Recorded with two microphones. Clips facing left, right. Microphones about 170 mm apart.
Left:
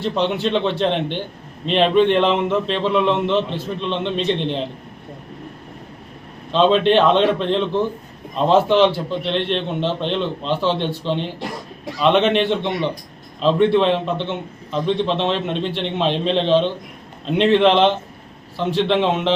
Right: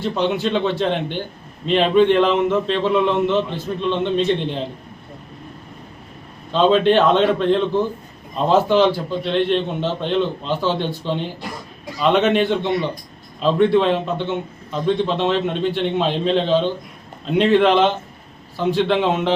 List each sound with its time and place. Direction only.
0.0 s a man's voice: centre (ahead or behind)
6.5 s a man's voice: 5° right (ahead or behind)